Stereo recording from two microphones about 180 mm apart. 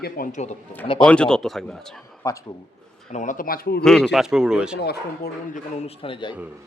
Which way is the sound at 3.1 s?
45° left (ahead or behind).